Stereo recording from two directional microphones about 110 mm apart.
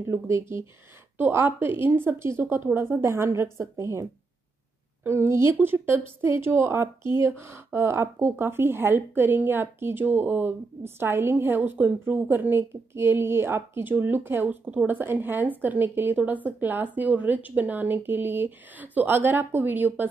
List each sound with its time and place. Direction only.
0.0 s speech: 25° right (ahead or behind)